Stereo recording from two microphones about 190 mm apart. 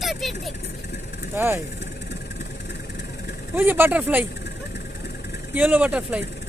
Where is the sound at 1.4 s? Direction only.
10° right (ahead or behind).